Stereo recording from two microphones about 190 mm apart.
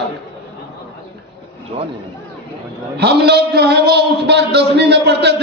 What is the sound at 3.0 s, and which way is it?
A man's voice, 60° right (ahead or behind).